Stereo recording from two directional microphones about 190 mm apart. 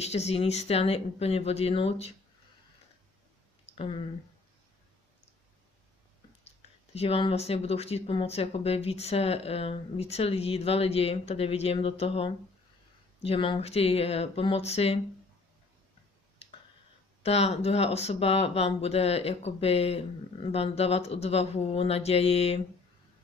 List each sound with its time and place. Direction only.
0.0 s speech: 35° left (ahead or behind)
3.6 s a sound: 30° left (ahead or behind)
6.4 s speech: 30° left (ahead or behind)
16.4 s finger snapping: 30° left (ahead or behind)
17.2 s speech: 35° left (ahead or behind)